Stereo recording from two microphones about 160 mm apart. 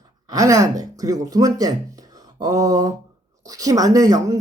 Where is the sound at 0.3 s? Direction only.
20° right (ahead or behind).